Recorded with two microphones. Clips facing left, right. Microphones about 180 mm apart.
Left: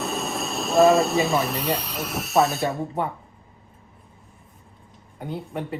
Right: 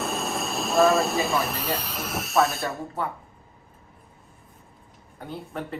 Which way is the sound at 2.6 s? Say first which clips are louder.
Left 4 dB; 20° left (ahead or behind).